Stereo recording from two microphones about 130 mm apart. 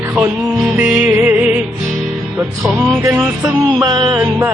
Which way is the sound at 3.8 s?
30° right (ahead or behind).